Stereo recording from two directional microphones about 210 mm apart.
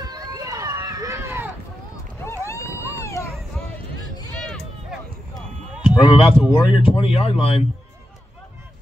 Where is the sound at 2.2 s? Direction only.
15° left (ahead or behind).